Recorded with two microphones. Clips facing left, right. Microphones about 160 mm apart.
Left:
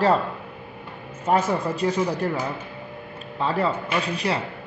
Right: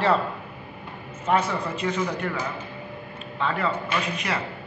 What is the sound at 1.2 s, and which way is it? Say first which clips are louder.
A man's voice: left 2 dB; 40° left (ahead or behind).